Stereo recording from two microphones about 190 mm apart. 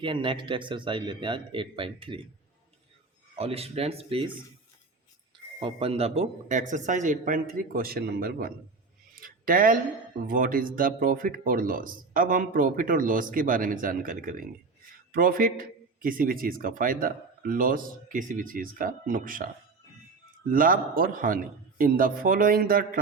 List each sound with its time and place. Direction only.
0.0 s a man's voice: 25° right (ahead or behind)
3.3 s speech: 30° right (ahead or behind)
5.5 s a man's voice: 30° right (ahead or behind); by 8.5 s 50° right (ahead or behind)
9.2 s a sound: 45° right (ahead or behind)
10.2 s a man's voice: 45° right (ahead or behind)
20.5 s a man's voice: 50° right (ahead or behind)